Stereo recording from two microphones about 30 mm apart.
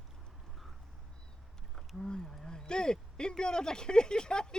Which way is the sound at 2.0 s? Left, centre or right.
Left.